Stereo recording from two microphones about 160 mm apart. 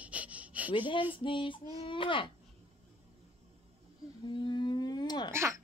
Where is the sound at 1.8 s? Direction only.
30° left (ahead or behind).